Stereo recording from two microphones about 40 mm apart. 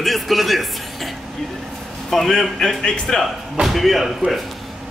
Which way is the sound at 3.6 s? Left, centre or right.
Centre.